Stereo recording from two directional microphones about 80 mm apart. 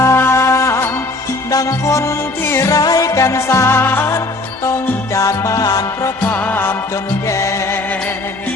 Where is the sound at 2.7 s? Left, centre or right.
Left.